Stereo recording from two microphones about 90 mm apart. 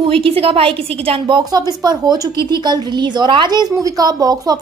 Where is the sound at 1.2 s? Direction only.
50° right (ahead or behind).